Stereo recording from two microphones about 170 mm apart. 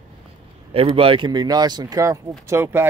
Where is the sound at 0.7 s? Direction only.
35° right (ahead or behind).